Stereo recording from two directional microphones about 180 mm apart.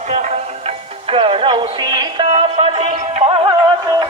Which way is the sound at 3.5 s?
25° right (ahead or behind).